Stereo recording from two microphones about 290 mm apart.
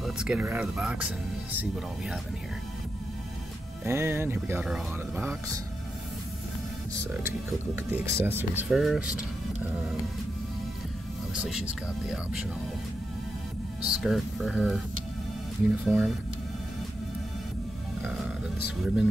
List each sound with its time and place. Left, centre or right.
0.0 s speech: centre
3.8 s speech: centre
7.2 s speech: centre
11.3 s speech: centre
13.8 s speech: centre